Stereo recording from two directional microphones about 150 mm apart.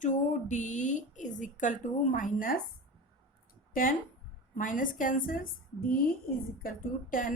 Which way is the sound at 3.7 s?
65° left (ahead or behind).